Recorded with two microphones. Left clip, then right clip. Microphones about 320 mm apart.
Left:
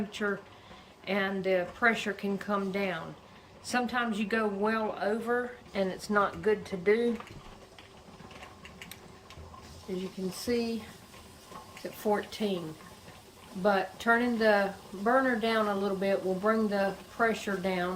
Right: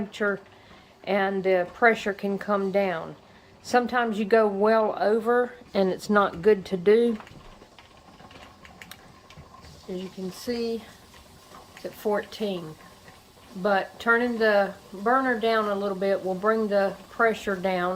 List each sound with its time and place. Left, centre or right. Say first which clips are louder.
0.2 s a woman's voice: right 7 dB; centre
9.9 s speech: right 2 dB; centre
11.8 s speech: right 3 dB; centre
13.6 s speech: right 3 dB; centre